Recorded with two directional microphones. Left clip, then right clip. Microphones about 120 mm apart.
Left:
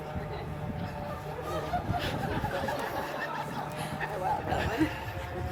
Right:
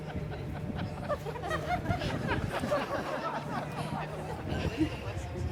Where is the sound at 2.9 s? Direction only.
30° left (ahead or behind).